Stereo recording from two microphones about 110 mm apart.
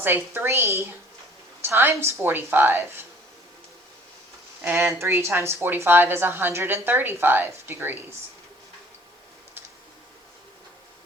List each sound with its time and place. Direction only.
0.0 s a woman's voice: 20° right (ahead or behind)
4.6 s a woman's voice: 20° right (ahead or behind)